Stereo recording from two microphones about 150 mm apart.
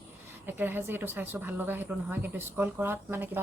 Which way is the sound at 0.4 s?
15° right (ahead or behind).